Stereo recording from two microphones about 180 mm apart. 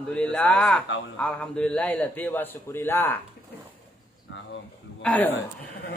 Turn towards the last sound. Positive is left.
turn(degrees=10)  # may be behind; listen again after turning